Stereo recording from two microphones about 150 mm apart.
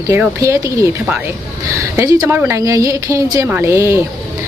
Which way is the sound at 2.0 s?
20° right (ahead or behind).